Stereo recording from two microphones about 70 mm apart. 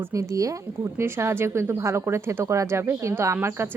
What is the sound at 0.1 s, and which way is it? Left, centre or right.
Speech, right.